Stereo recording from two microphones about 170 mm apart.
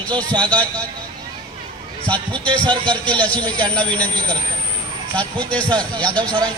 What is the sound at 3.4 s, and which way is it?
Speech, 25° right (ahead or behind).